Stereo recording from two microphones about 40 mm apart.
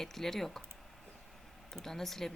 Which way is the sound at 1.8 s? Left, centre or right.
Centre.